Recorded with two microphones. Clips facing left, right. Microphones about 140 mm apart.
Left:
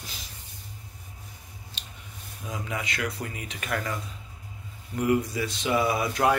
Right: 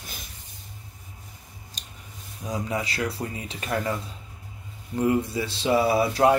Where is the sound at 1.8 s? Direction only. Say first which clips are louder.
Even; 40° right (ahead or behind).